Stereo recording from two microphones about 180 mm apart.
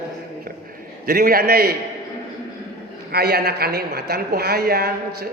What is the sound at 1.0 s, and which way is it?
Speech, 55° right (ahead or behind).